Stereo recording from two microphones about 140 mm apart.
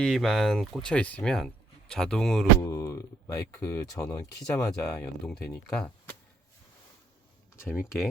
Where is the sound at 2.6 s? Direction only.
20° left (ahead or behind).